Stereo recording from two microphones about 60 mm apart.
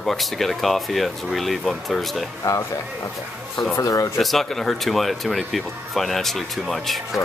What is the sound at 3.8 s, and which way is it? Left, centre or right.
Speech, left.